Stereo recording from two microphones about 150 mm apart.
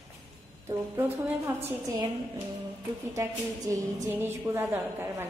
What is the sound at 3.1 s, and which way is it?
A woman's voice, 20° right (ahead or behind).